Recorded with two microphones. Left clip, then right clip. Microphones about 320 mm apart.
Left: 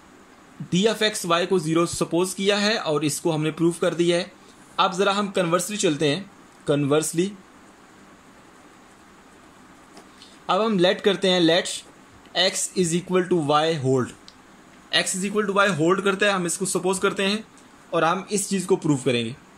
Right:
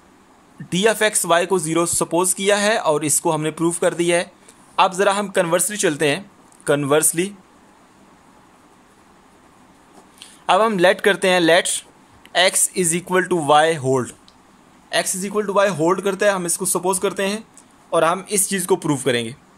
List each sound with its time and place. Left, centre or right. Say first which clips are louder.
0.7 s a man's voice: right 4 dB; right
10.4 s a man's voice: right 6 dB; right